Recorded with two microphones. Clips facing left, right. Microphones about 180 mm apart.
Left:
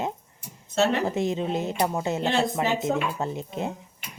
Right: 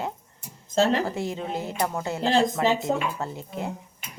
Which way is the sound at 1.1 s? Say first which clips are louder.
Left 4 dB; 20° left (ahead or behind).